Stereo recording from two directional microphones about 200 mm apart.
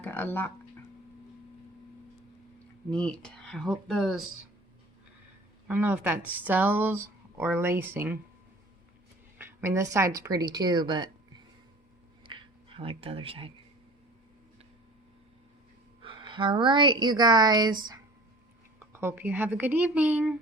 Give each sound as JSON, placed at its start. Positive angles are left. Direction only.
{"t": 0.0, "sound": "speech", "side_deg": 10}
{"t": 2.9, "sound": "speech", "side_deg": 5}
{"t": 5.6, "sound": "speech", "side_deg": -10}
{"t": 9.4, "sound": "speech", "side_deg": -10}
{"t": 12.2, "sound": "a sound", "side_deg": -25}
{"t": 16.0, "sound": "speech", "side_deg": -25}
{"t": 18.9, "sound": "speech", "side_deg": -10}